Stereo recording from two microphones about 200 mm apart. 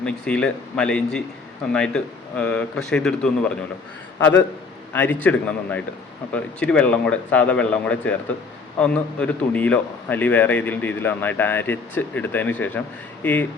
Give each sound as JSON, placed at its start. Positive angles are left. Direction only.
{"t": 0.0, "sound": "a man's voice", "side_deg": 5}